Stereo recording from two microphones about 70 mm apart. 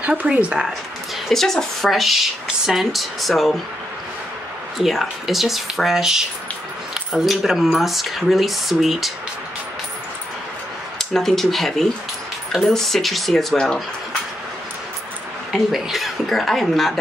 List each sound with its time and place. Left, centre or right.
0.0 s speech: centre
1.3 s speech: centre
4.7 s speech: centre
11.0 s speech: centre
15.5 s speech: centre